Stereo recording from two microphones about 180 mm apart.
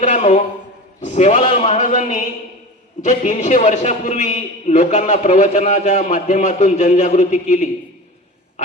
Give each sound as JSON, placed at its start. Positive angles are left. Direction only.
{"t": 0.0, "sound": "a man's voice", "side_deg": 40}